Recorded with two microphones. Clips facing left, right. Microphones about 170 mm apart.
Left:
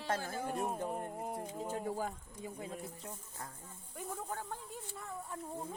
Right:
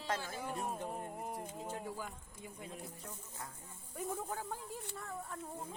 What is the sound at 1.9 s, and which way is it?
Speech, 45° left (ahead or behind).